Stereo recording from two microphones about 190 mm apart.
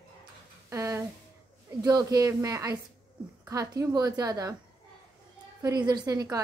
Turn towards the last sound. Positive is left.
turn(degrees=-20)  # may be behind; listen again after turning